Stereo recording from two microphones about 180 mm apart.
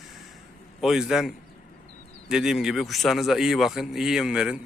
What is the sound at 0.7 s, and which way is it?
Speech, 5° right (ahead or behind).